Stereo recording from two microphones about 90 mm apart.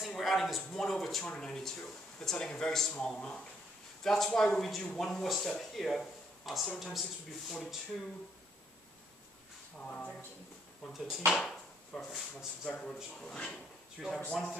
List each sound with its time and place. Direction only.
0.0 s speech: centre (ahead or behind)
9.8 s speech: 10° left (ahead or behind)
10.9 s speech: centre (ahead or behind)
12.6 s speech: 10° left (ahead or behind)